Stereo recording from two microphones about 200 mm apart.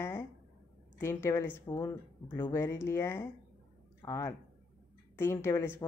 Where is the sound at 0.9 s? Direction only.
10° left (ahead or behind).